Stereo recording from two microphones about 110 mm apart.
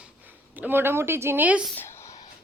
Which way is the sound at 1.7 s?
20° left (ahead or behind).